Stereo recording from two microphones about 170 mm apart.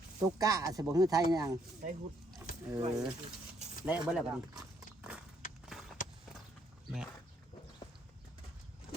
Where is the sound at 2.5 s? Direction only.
55° left (ahead or behind).